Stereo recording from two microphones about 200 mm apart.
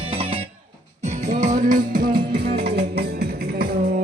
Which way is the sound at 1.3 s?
40° right (ahead or behind).